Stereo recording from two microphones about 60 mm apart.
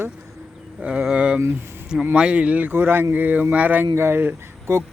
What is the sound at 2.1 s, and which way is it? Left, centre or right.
Speech, centre.